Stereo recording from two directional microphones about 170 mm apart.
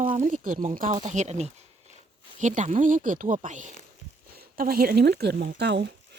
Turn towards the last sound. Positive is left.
turn(degrees=-85)